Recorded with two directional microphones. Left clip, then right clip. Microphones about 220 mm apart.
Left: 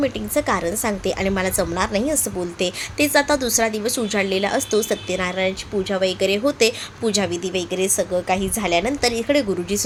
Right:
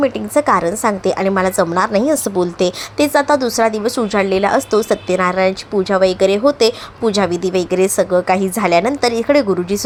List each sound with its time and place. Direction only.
0.0 s a woman's voice: 20° right (ahead or behind)